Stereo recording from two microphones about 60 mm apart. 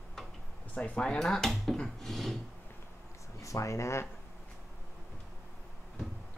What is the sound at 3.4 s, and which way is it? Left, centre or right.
Speech, left.